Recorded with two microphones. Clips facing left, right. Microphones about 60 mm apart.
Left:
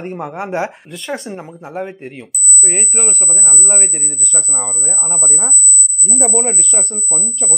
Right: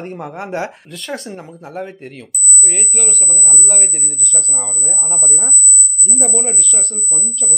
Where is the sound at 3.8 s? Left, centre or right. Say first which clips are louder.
Left 2 dB; centre.